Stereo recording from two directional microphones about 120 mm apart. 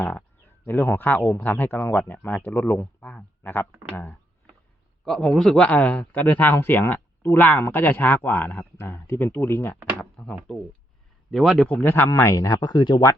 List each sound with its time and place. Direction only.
0.6 s speech: 15° left (ahead or behind)
5.0 s speech: 5° left (ahead or behind); by 9.7 s 20° left (ahead or behind)
10.0 s speech: 5° left (ahead or behind)
11.7 s speech: 15° left (ahead or behind); by 13.0 s 40° left (ahead or behind)